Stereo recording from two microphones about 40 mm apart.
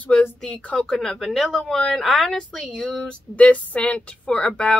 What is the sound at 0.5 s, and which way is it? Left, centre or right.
Speech, left.